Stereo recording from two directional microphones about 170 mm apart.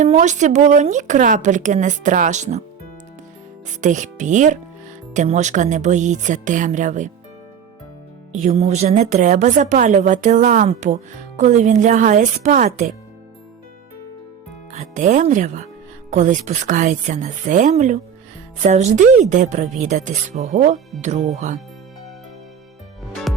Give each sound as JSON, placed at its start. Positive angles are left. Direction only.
{"t": 0.0, "sound": "speech", "side_deg": -45}
{"t": 3.7, "sound": "speech", "side_deg": -45}
{"t": 8.3, "sound": "speech", "side_deg": -40}
{"t": 14.7, "sound": "speech", "side_deg": -45}